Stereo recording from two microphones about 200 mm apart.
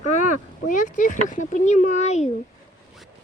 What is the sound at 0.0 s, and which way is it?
Speech, 40° left (ahead or behind).